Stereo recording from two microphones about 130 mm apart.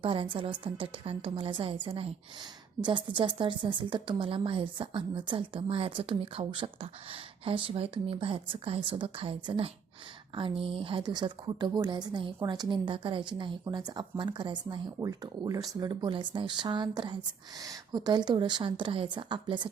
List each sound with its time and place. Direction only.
0.0 s a woman's voice: 40° right (ahead or behind)
14.9 s a woman's voice: 25° right (ahead or behind)